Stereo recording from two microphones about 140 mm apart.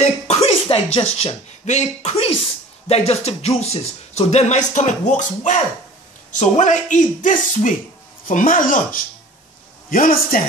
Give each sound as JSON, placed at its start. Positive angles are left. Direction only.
{"t": 0.0, "sound": "speech", "side_deg": 50}
{"t": 2.9, "sound": "music", "side_deg": 50}
{"t": 4.3, "sound": "speech", "side_deg": 55}
{"t": 9.8, "sound": "a man's voice", "side_deg": 80}